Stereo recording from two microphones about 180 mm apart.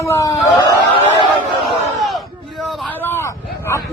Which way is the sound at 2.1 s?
Centre (ahead or behind).